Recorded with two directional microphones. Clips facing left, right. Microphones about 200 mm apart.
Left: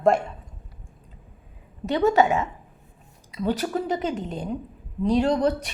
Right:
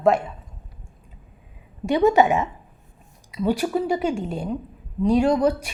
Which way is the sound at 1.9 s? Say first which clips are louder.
Right 3 dB; 15° right (ahead or behind).